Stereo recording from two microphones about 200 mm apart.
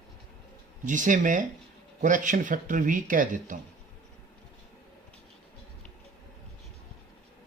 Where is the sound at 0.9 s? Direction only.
40° right (ahead or behind).